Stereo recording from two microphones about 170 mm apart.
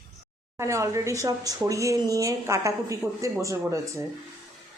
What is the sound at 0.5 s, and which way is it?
A woman's voice, 15° right (ahead or behind).